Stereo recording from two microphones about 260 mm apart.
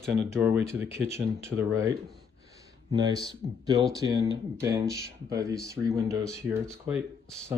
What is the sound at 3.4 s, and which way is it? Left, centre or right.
Speech, right.